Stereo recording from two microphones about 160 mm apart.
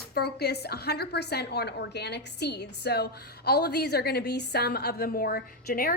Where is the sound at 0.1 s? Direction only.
80° left.